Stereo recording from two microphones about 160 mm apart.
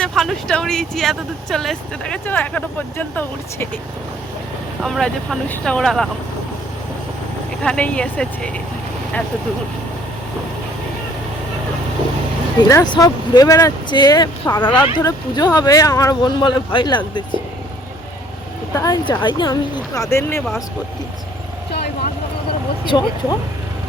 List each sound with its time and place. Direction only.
0.0 s speech: centre (ahead or behind)
4.8 s speech: centre (ahead or behind)
7.6 s speech: 5° left (ahead or behind)
12.6 s speech: 25° left (ahead or behind)
18.7 s speech: 20° left (ahead or behind)
22.9 s speech: 25° left (ahead or behind)